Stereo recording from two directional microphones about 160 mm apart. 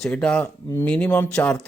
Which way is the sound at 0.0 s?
5° left (ahead or behind).